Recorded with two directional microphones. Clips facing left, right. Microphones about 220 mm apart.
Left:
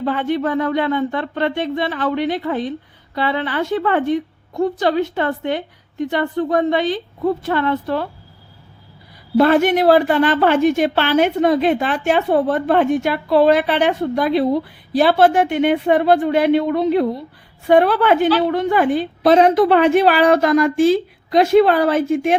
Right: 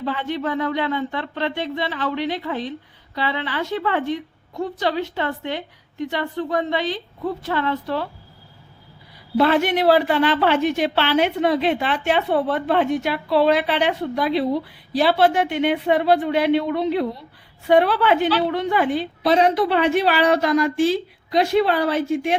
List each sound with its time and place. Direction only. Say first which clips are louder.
0.0 s a woman's voice: left 5 dB; 50° left (ahead or behind)
9.4 s a woman's voice: left 4 dB; 50° left (ahead or behind)